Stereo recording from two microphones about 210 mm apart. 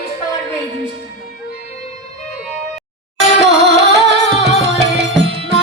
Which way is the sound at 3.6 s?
55° right (ahead or behind).